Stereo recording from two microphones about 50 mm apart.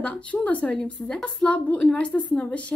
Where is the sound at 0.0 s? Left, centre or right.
Left.